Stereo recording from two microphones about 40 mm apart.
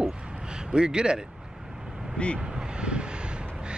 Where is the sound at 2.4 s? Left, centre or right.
Centre.